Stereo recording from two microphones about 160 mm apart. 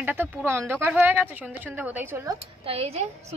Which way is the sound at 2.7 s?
40° right (ahead or behind).